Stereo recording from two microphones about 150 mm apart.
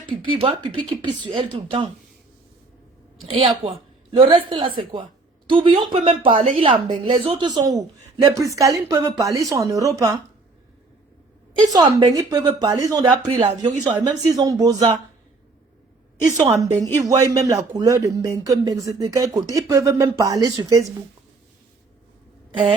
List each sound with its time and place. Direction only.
0.1 s speech: 35° right (ahead or behind)
3.3 s a woman's voice: 40° right (ahead or behind); by 10.2 s 20° right (ahead or behind)
11.6 s a woman's voice: 25° right (ahead or behind); by 13.7 s 40° right (ahead or behind)
14.0 s a woman's voice: 25° right (ahead or behind)
16.6 s a woman's voice: 20° right (ahead or behind)